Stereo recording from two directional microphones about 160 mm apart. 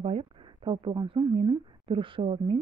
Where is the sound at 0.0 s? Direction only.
35° right (ahead or behind).